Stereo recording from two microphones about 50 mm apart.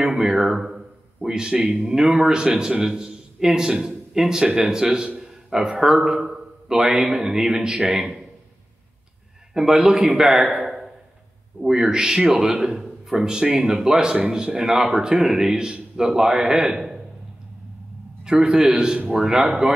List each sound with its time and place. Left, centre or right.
0.0 s speech: centre
5.2 s a sound: centre
6.0 s a man's voice: centre
9.5 s a man's voice: centre
18.2 s speech: centre